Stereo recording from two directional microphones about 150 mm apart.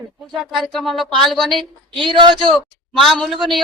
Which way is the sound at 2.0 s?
30° right (ahead or behind).